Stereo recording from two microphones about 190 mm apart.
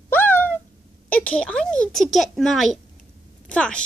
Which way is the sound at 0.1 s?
10° left (ahead or behind).